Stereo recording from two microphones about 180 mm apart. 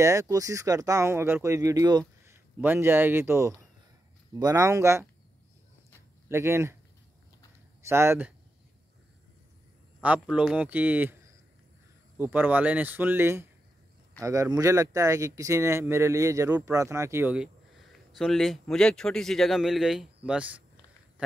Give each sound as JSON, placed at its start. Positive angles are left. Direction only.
{"t": 0.0, "sound": "speech", "side_deg": -15}
{"t": 6.2, "sound": "speech", "side_deg": -15}
{"t": 7.8, "sound": "speech", "side_deg": -15}
{"t": 10.0, "sound": "speech", "side_deg": -10}
{"t": 12.2, "sound": "speech", "side_deg": -10}